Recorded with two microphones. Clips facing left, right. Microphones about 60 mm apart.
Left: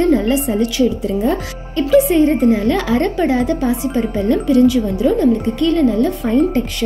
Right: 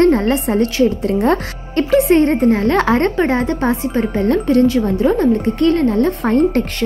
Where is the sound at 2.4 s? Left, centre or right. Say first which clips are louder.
Right 1 dB; right.